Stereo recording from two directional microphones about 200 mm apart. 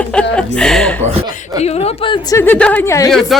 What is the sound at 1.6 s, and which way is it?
Speech, 30° left (ahead or behind).